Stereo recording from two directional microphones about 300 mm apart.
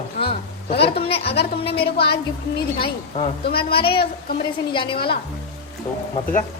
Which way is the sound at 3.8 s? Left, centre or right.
Centre.